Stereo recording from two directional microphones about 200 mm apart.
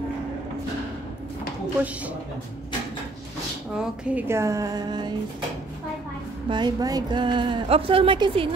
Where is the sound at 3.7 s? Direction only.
5° right (ahead or behind); by 5.1 s 20° right (ahead or behind).